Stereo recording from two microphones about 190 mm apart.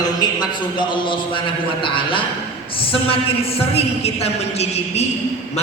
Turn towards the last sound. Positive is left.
turn(degrees=35)  # may be behind; listen again after turning